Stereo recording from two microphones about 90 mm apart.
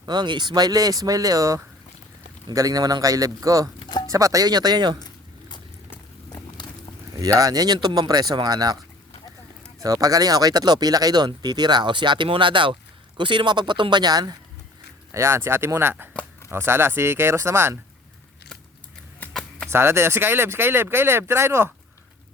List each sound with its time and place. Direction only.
0.0 s speech: 55° right (ahead or behind)
3.8 s a sound: 55° left (ahead or behind)
4.0 s speech: 40° right (ahead or behind)
4.9 s a sound: 50° left (ahead or behind)
7.2 s speech: 40° right (ahead or behind)
9.8 s speech: 40° right (ahead or behind)
15.1 s speech: 30° right (ahead or behind)
19.3 s a sound: 10° left (ahead or behind)
19.7 s speech: 30° right (ahead or behind)